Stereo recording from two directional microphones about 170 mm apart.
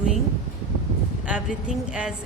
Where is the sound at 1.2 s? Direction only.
5° right (ahead or behind).